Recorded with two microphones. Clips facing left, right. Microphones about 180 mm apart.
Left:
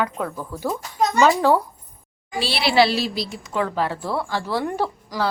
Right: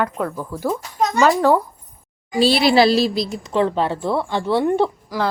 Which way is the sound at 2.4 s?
45° right (ahead or behind).